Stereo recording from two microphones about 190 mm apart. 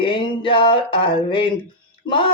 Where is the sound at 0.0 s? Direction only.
25° left (ahead or behind).